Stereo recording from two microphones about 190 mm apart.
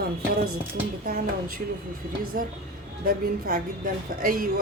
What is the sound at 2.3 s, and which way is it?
A woman's voice, 45° right (ahead or behind).